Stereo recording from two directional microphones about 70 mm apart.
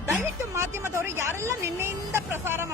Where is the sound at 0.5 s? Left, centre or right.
Right.